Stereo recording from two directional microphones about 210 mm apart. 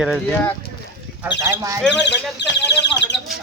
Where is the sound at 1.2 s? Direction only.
15° right (ahead or behind).